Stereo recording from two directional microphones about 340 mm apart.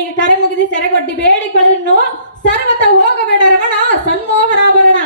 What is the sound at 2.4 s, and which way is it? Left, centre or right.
A woman's voice, left.